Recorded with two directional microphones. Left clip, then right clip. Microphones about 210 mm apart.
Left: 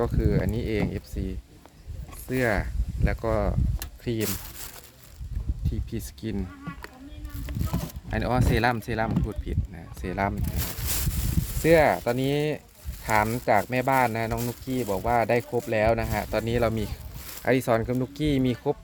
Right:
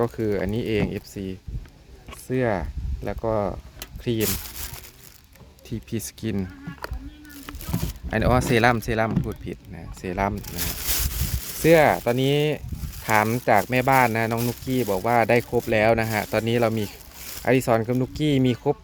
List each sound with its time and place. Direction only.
0.0 s speech: 20° right (ahead or behind)
5.6 s speech: 30° right (ahead or behind)
8.1 s speech: 30° right (ahead or behind)
9.2 s speech: 15° right (ahead or behind)
11.6 s speech: 20° right (ahead or behind)